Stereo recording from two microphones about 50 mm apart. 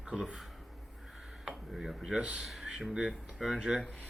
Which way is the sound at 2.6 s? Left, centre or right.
Centre.